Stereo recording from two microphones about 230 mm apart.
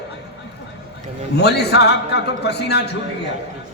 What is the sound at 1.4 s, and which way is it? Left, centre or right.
A man's voice, left.